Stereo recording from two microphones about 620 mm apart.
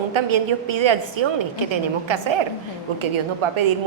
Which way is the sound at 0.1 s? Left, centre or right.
Right.